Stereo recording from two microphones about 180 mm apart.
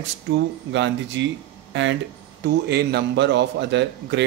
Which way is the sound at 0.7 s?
90° right.